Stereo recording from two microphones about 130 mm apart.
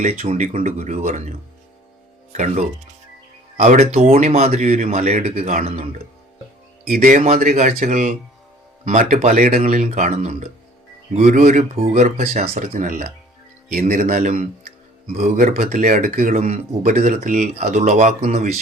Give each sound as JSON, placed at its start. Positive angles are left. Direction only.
{"t": 0.0, "sound": "speech", "side_deg": -55}
{"t": 2.3, "sound": "speech", "side_deg": -65}
{"t": 6.9, "sound": "speech", "side_deg": -90}
{"t": 7.3, "sound": "speech", "side_deg": -70}
{"t": 15.2, "sound": "speech", "side_deg": -90}